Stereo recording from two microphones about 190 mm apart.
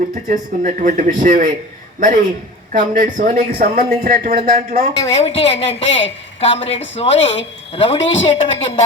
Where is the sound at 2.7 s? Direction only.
45° right (ahead or behind).